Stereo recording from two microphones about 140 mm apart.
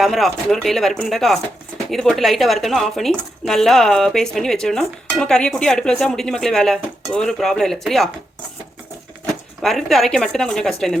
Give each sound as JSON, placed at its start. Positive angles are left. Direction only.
{"t": 0.0, "sound": "speech", "side_deg": 0}
{"t": 9.6, "sound": "speech", "side_deg": 0}